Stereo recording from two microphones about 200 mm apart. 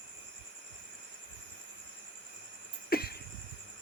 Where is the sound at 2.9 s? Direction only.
50° left (ahead or behind).